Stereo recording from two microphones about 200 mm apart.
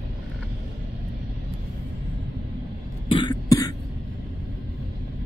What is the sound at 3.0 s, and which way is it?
Cough, 25° left (ahead or behind).